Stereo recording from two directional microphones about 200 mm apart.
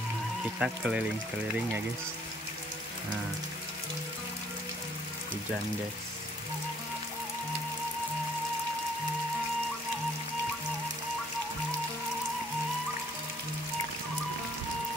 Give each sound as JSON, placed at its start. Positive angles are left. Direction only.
{"t": 0.6, "sound": "speech", "side_deg": -5}